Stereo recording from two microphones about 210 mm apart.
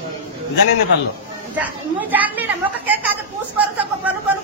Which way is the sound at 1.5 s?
10° right (ahead or behind).